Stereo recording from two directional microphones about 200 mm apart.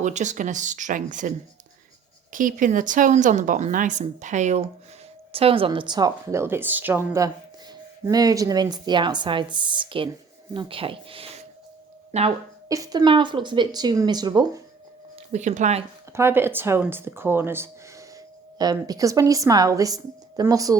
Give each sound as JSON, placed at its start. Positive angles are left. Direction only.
{"t": 0.0, "sound": "a woman's voice", "side_deg": -35}
{"t": 2.3, "sound": "a woman's voice", "side_deg": -40}
{"t": 12.6, "sound": "speech", "side_deg": -15}
{"t": 15.3, "sound": "a woman's voice", "side_deg": -35}
{"t": 16.1, "sound": "speech", "side_deg": -10}